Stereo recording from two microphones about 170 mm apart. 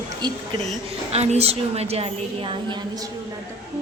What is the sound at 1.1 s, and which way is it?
A woman's voice, 40° right (ahead or behind).